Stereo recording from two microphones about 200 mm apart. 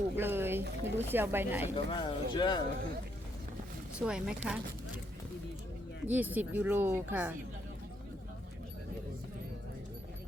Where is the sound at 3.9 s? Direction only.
5° right (ahead or behind).